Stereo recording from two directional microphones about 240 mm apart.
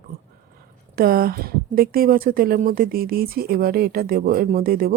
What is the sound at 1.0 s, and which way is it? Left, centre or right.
Speech, right.